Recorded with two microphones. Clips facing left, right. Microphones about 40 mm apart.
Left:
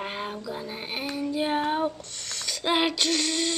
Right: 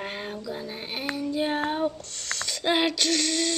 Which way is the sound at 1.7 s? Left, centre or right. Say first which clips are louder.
Left 1 dB; centre.